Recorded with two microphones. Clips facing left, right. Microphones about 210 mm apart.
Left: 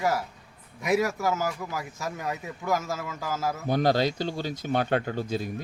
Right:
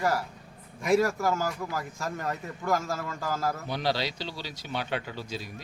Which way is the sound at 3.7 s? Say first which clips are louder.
Left 6 dB; 50° left (ahead or behind).